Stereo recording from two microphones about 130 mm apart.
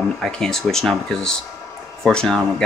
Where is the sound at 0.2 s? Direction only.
5° left (ahead or behind).